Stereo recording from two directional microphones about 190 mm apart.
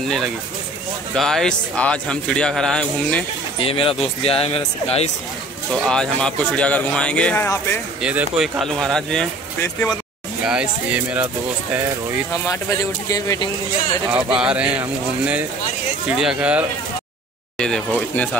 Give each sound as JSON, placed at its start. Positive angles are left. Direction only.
{"t": 1.1, "sound": "a man's voice", "side_deg": 0}
{"t": 3.5, "sound": "speech", "side_deg": 30}
{"t": 5.8, "sound": "a man's voice", "side_deg": 5}
{"t": 8.0, "sound": "a man's voice", "side_deg": -5}
{"t": 10.4, "sound": "a man's voice", "side_deg": -5}
{"t": 12.4, "sound": "speech", "side_deg": 20}
{"t": 14.4, "sound": "a man's voice", "side_deg": -5}